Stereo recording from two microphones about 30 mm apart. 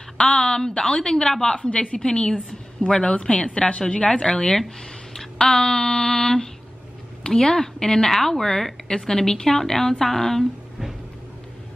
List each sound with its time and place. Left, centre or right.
0.4 s speech: left
1.5 s a woman's voice: left
2.0 s speech: left
2.8 s a woman's voice: left
3.3 s a woman's voice: left
4.3 s speech: centre
8.1 s a woman's voice: centre
8.9 s a woman's voice: left